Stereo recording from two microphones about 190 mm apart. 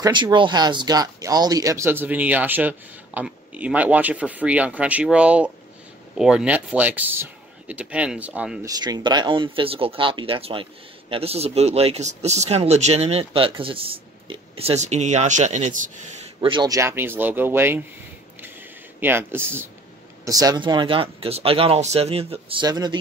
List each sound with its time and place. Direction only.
0.0 s speech: 25° right (ahead or behind); by 8.5 s 5° right (ahead or behind)
8.6 s speech: 20° right (ahead or behind); by 15.9 s 40° right (ahead or behind)
16.3 s speech: 25° right (ahead or behind)
18.9 s speech: 10° right (ahead or behind)